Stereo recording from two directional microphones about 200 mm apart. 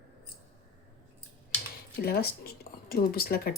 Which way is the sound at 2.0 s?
50° left (ahead or behind).